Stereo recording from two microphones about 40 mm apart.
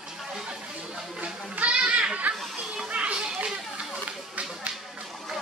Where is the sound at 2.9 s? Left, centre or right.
Right.